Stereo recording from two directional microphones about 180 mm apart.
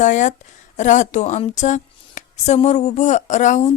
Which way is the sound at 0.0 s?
40° left (ahead or behind).